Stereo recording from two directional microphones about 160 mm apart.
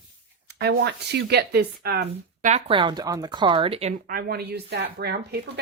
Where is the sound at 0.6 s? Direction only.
90° right.